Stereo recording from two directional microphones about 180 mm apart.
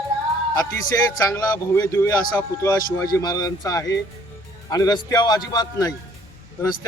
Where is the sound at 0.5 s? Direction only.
20° left (ahead or behind).